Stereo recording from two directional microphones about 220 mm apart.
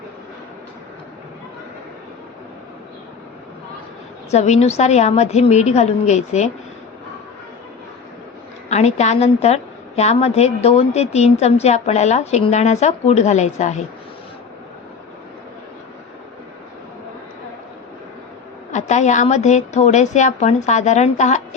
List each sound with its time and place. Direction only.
4.3 s a woman's voice: 30° left (ahead or behind)
8.7 s a woman's voice: 30° left (ahead or behind)
18.7 s a woman's voice: 30° left (ahead or behind)